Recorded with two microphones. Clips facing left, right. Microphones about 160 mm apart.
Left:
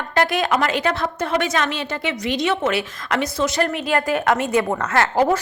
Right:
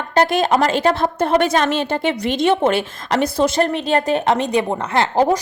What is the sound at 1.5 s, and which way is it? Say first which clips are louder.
Speech: right 5 dB; 45° right (ahead or behind).